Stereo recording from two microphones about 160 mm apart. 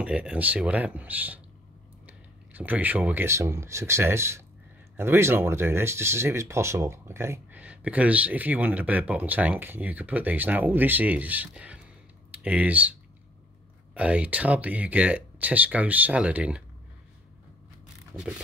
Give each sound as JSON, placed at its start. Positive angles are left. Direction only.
{"t": 0.0, "sound": "speech", "side_deg": -5}
{"t": 13.9, "sound": "speech", "side_deg": -10}